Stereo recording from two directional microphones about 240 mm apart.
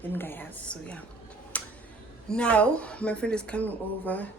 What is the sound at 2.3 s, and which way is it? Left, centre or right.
Speech, centre.